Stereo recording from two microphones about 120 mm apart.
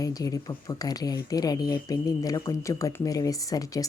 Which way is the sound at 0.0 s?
30° left (ahead or behind).